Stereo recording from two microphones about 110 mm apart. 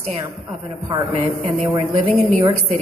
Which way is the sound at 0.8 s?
35° right (ahead or behind).